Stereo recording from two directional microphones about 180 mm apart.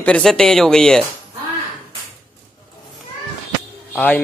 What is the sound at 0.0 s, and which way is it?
A man's voice, 5° left (ahead or behind).